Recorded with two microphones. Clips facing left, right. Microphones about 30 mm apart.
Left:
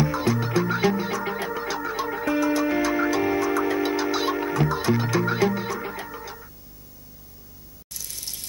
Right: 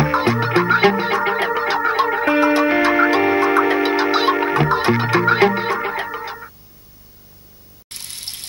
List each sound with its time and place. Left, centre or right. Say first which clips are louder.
0.0 s music: right 6 dB; right
7.9 s water: right 5 dB; right